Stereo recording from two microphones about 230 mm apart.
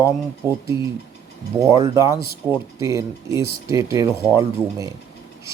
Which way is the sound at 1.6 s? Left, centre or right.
Centre.